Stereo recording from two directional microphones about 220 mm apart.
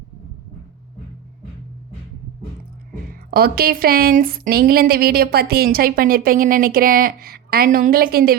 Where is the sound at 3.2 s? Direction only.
45° right (ahead or behind).